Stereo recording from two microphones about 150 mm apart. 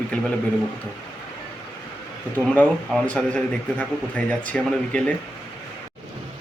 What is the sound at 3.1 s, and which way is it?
A man's voice, 5° left (ahead or behind).